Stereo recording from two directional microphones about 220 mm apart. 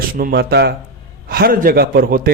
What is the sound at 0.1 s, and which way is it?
A man's voice, 40° right (ahead or behind).